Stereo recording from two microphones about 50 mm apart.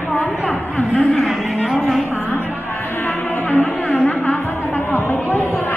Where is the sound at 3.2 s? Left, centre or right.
Left.